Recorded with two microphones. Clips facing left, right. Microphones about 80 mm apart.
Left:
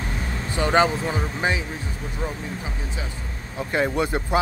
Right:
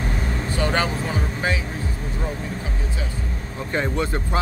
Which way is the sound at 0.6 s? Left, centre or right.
Centre.